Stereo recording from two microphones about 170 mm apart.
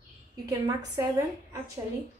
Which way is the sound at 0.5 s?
20° right (ahead or behind).